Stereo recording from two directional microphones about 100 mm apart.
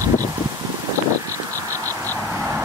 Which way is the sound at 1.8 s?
20° left (ahead or behind).